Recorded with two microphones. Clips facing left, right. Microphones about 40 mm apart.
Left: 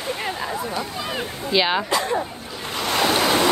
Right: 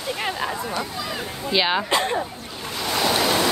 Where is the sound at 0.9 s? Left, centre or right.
Left.